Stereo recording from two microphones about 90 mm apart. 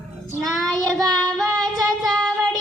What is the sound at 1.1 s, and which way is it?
Speech, centre (ahead or behind).